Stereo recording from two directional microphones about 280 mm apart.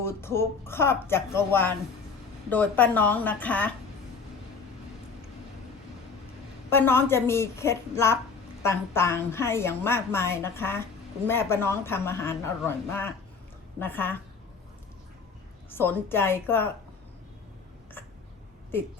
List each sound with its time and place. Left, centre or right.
0.0 s a woman's voice: centre
6.7 s a woman's voice: centre
15.7 s a woman's voice: centre